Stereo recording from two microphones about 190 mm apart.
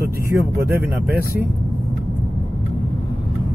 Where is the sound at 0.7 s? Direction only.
10° right (ahead or behind).